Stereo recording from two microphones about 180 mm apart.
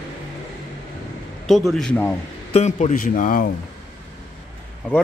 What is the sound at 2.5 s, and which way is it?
Speech, 40° left (ahead or behind).